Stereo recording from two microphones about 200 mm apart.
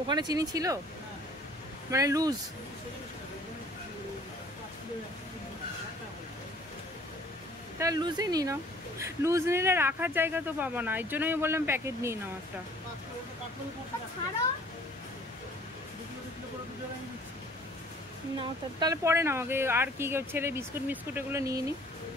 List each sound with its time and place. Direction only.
0.1 s speech: 20° right (ahead or behind)
1.9 s speech: 15° right (ahead or behind)
7.8 s speech: 20° right (ahead or behind)
18.4 s speech: 20° right (ahead or behind)